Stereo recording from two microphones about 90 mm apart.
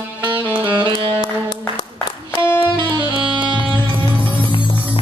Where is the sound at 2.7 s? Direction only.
55° right (ahead or behind).